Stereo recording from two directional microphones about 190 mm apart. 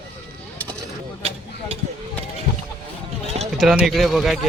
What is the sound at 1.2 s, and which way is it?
Speech, 30° right (ahead or behind).